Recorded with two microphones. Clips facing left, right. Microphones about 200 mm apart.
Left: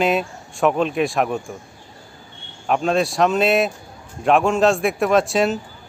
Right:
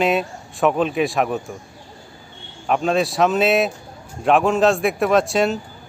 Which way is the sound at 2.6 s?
Centre (ahead or behind).